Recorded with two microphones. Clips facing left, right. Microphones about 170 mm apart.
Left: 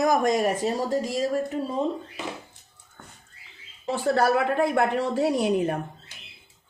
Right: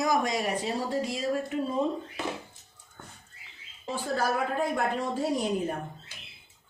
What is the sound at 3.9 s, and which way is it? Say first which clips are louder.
Speech: left 7 dB; 70° left (ahead or behind).